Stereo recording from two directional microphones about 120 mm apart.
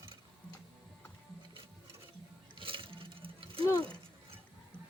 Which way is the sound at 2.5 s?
45° right (ahead or behind).